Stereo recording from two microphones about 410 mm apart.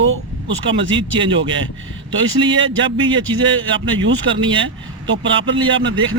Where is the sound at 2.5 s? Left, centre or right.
Right.